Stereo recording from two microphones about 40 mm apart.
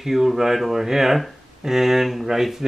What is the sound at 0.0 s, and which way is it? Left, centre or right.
Speech, centre.